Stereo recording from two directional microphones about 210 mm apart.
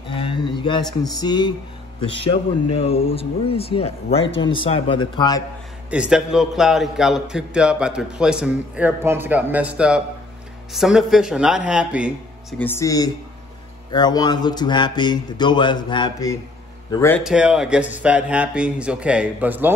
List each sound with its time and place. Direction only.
0.1 s music: 25° left (ahead or behind)
2.2 s speech: 25° left (ahead or behind)
5.9 s a man's voice: 5° right (ahead or behind)
12.5 s speech: 10° left (ahead or behind)
17.2 s a man's voice: 5° right (ahead or behind)